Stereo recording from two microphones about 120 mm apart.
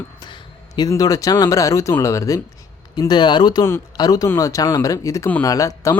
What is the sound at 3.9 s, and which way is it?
Speech, 30° left (ahead or behind).